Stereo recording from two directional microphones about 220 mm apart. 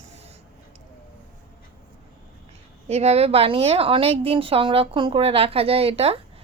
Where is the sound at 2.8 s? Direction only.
30° right (ahead or behind).